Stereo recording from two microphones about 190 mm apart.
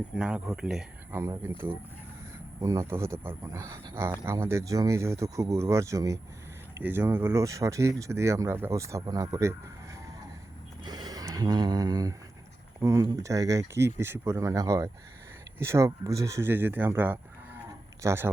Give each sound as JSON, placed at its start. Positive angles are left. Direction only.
{"t": 0.2, "sound": "speech", "side_deg": -5}
{"t": 10.8, "sound": "bleat", "side_deg": -20}
{"t": 12.8, "sound": "speech", "side_deg": -15}